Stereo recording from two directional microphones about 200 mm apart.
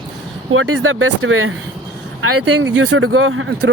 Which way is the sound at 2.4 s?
80° right.